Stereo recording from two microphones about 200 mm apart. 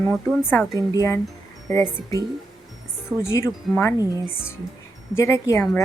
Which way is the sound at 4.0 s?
15° right (ahead or behind).